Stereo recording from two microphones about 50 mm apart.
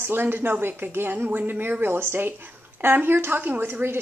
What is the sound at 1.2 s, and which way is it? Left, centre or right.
A woman's voice, right.